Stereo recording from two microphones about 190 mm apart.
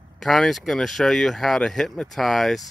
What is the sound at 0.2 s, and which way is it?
Speech, centre (ahead or behind).